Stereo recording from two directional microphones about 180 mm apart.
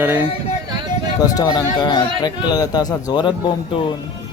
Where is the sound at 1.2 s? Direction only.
20° left (ahead or behind).